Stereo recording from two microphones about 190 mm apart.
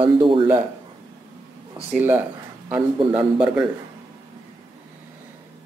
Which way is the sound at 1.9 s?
10° right (ahead or behind).